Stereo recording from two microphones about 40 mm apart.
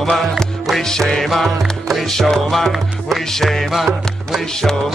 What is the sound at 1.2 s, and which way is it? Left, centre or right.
Music, centre.